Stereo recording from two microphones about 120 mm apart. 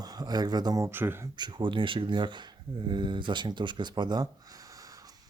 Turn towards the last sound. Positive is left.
turn(degrees=-35)  # may be behind; listen again after turning